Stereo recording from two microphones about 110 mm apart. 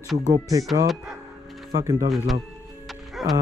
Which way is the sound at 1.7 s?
30° right (ahead or behind).